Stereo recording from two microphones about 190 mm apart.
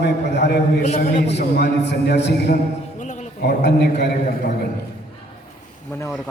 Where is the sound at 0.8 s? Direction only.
35° left (ahead or behind).